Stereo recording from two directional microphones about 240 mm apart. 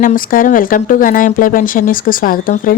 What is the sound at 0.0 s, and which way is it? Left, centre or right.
A woman's voice, left.